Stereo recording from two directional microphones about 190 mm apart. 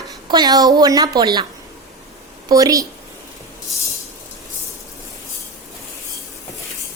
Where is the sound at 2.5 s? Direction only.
20° right (ahead or behind).